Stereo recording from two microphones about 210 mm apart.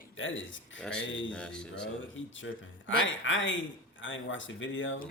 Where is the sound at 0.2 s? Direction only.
65° left (ahead or behind).